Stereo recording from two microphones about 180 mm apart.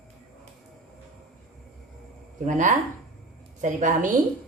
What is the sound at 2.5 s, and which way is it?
A woman's voice, 45° right (ahead or behind).